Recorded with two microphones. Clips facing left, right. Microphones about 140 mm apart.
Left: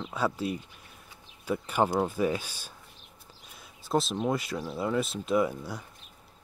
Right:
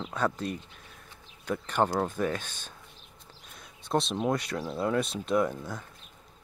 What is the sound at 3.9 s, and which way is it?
Speech, centre (ahead or behind).